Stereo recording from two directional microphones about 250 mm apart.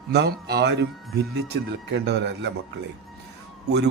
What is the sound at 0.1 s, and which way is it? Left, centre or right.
Speech, right.